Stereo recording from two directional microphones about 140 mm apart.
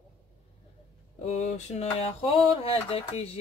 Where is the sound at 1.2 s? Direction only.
50° left (ahead or behind).